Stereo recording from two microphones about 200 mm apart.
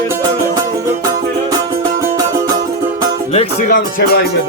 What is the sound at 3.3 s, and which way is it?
Music, 40° left (ahead or behind).